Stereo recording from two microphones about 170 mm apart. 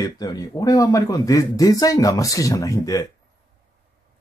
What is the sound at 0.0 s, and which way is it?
Speech, 20° left (ahead or behind).